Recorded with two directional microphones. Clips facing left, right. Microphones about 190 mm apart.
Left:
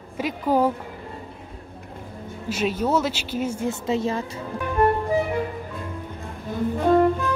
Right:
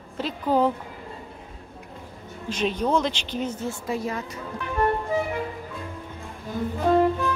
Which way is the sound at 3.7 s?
25° left (ahead or behind).